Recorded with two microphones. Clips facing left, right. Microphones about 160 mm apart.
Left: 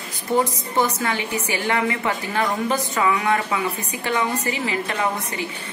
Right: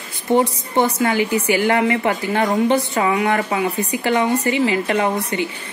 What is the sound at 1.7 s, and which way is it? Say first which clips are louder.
A woman's voice: right 5 dB; 30° right (ahead or behind).